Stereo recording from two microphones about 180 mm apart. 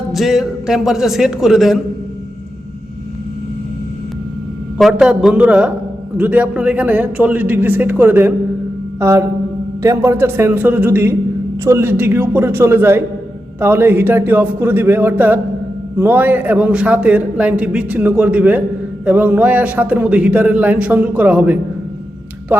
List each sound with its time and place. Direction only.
0.1 s a man's voice: centre (ahead or behind)
4.8 s a man's voice: centre (ahead or behind)
9.0 s a sound: 15° right (ahead or behind)
9.8 s a man's voice: 15° right (ahead or behind)